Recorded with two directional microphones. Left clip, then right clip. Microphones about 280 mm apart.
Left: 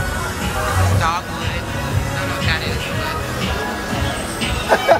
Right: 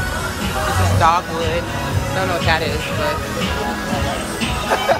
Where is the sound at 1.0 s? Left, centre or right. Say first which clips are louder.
Right 5 dB; centre.